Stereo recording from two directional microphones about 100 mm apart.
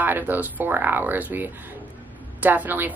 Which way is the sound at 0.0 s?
20° right (ahead or behind).